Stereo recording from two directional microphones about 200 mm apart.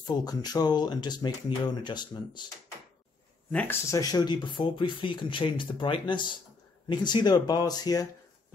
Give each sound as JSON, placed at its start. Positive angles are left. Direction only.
{"t": 0.0, "sound": "speech", "side_deg": 20}
{"t": 3.5, "sound": "speech", "side_deg": 15}